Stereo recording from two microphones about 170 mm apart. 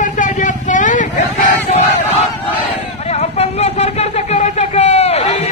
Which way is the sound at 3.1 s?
40° left (ahead or behind).